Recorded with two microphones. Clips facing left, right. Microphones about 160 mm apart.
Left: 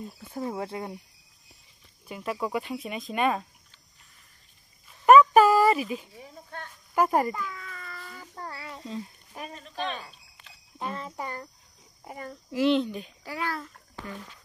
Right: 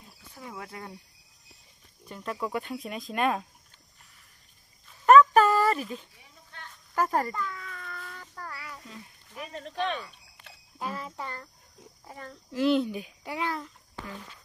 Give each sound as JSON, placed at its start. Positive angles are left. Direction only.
{"t": 0.3, "sound": "speech", "side_deg": 35}
{"t": 2.0, "sound": "speech", "side_deg": 10}
{"t": 5.0, "sound": "dog", "side_deg": 10}
{"t": 7.0, "sound": "a sound", "side_deg": 15}
{"t": 8.4, "sound": "child singing", "side_deg": 30}
{"t": 9.6, "sound": "speech", "side_deg": -65}
{"t": 10.8, "sound": "speech", "side_deg": -5}
{"t": 11.1, "sound": "a child's voice", "side_deg": 10}
{"t": 12.6, "sound": "a child's voice", "side_deg": -10}